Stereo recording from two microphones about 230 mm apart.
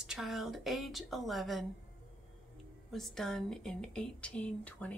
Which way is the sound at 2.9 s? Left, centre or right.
Centre.